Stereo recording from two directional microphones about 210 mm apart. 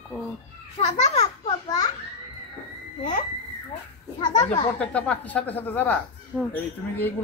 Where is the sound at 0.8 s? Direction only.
30° left (ahead or behind).